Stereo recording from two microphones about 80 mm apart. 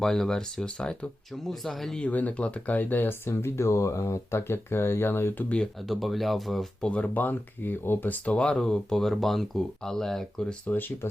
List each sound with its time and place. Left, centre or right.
0.0 s speech: centre
2.0 s speech: centre
5.9 s speech: centre
6.8 s speech: centre
10.7 s speech: left